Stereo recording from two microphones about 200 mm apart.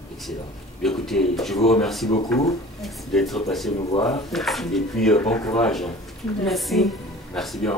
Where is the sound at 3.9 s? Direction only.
25° left (ahead or behind).